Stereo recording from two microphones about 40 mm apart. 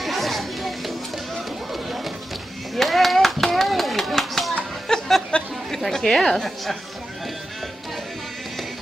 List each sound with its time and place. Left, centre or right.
0.0 s music: centre
1.7 s run: centre
2.7 s clapping: centre
4.8 s a sound: centre
5.3 s a sound: left
5.9 s a woman's voice: centre